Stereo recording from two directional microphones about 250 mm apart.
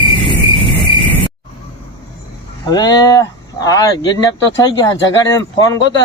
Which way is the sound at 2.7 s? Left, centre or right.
Centre.